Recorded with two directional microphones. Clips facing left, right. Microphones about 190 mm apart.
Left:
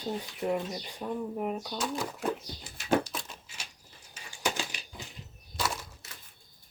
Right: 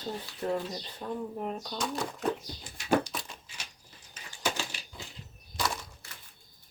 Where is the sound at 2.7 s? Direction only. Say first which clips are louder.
Even; centre (ahead or behind).